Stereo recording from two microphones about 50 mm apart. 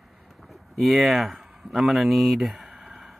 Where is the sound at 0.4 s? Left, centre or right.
Centre.